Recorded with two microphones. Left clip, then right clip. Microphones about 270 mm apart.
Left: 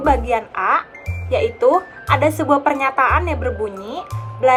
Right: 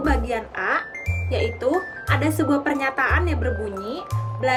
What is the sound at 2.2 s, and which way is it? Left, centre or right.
Speech, centre.